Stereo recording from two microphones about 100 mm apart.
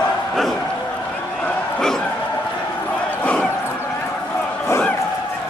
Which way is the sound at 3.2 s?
10° left (ahead or behind).